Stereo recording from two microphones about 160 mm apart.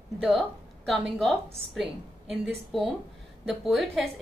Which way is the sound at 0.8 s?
Centre (ahead or behind).